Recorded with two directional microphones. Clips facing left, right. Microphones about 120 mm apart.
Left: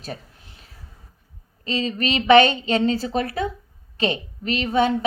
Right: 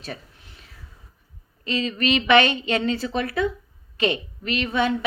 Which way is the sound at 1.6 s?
35° left (ahead or behind).